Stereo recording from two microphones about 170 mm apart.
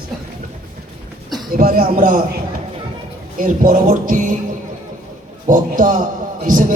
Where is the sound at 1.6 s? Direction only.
60° right (ahead or behind).